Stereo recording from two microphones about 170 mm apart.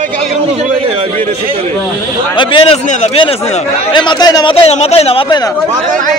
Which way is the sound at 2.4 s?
30° left (ahead or behind).